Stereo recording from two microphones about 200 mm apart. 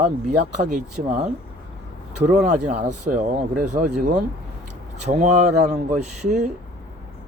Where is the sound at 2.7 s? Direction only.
40° right (ahead or behind).